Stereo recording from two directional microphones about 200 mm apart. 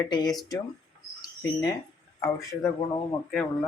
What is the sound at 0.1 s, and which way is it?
Speech, 20° left (ahead or behind).